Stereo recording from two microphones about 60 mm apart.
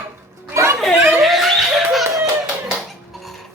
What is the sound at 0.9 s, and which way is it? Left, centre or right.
Chuckle, right.